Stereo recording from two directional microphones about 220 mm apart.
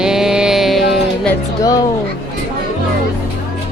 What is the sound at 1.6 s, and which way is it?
Speech, 15° left (ahead or behind).